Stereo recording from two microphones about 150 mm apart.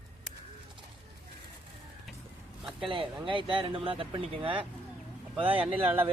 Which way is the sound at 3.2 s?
35° right (ahead or behind).